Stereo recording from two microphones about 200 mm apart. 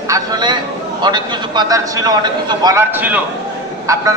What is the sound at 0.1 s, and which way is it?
A man's voice, 20° right (ahead or behind).